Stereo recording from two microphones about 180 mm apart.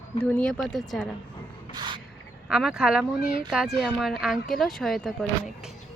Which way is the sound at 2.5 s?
5° right (ahead or behind).